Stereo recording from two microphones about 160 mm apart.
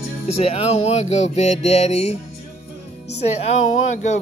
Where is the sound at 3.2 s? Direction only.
45° left (ahead or behind).